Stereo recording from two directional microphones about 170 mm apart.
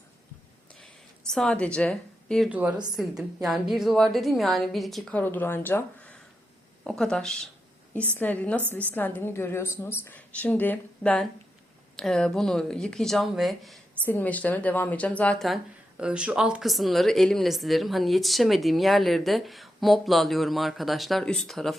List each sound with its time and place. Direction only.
1.3 s speech: 5° left (ahead or behind)
2.5 s a woman's voice: 10° right (ahead or behind)